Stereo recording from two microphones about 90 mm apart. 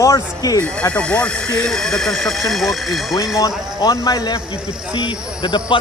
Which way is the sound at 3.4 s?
40° left (ahead or behind).